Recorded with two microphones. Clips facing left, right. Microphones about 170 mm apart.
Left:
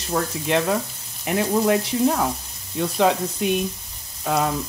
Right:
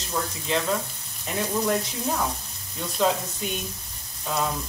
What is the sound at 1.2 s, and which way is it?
Speech, 70° left (ahead or behind).